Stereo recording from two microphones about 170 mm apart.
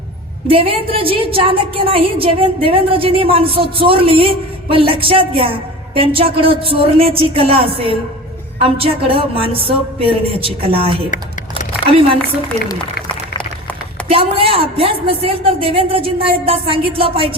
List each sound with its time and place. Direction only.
0.4 s a woman's voice: 35° right (ahead or behind)
14.1 s a woman's voice: 30° right (ahead or behind)